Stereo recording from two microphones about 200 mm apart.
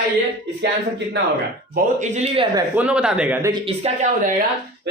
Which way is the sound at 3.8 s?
30° right (ahead or behind).